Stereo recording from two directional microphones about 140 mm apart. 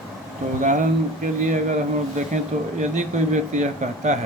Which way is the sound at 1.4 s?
65° right (ahead or behind).